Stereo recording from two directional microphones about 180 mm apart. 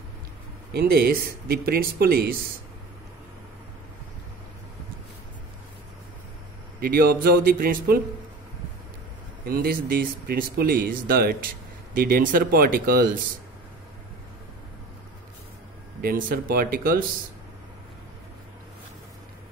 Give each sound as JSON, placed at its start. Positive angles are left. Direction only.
{"t": 0.7, "sound": "speech", "side_deg": -60}
{"t": 6.8, "sound": "speech", "side_deg": -55}
{"t": 9.5, "sound": "speech", "side_deg": -55}
{"t": 16.0, "sound": "speech", "side_deg": -50}